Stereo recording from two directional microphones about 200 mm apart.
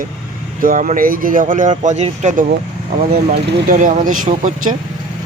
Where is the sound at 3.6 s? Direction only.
40° right (ahead or behind).